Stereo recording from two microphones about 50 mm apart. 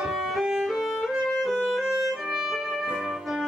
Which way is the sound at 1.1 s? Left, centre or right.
Centre.